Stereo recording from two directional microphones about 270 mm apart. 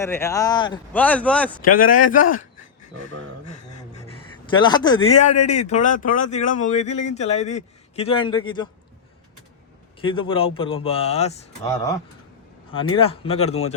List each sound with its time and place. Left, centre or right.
0.0 s speech: centre
0.9 s speech: centre
1.6 s speech: left
4.0 s a man's voice: centre
10.0 s speech: centre
11.6 s speech: centre